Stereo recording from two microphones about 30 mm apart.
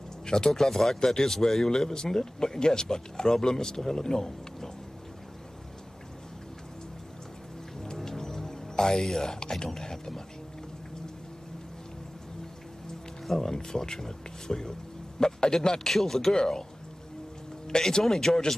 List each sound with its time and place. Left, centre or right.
0.2 s a sound: left
0.5 s speech: centre
7.8 s music: centre
9.0 s speech: centre
13.2 s music: centre
13.5 s a man's voice: centre
15.9 s speech: centre
17.6 s speech: left